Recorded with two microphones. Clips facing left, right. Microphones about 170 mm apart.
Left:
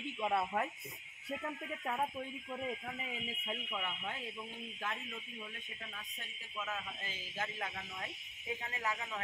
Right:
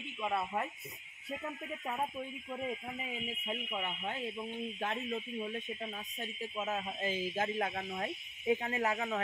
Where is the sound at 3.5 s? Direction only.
25° right (ahead or behind); by 5.5 s 40° right (ahead or behind).